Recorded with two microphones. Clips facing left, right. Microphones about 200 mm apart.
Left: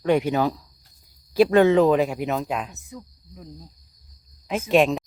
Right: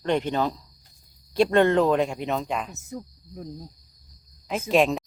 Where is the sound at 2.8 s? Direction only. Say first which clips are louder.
Right 4 dB; 40° right (ahead or behind).